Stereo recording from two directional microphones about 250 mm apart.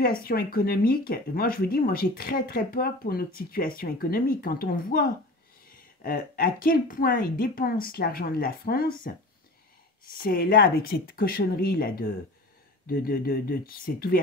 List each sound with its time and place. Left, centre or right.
0.0 s speech: left
10.1 s speech: left